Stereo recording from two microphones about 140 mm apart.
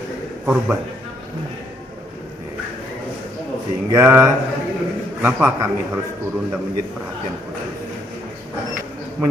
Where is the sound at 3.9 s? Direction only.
15° right (ahead or behind).